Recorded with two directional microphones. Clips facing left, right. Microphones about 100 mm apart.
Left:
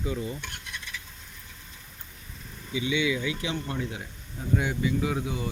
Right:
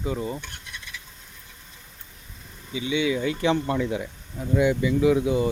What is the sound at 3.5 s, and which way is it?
Speech, 90° right.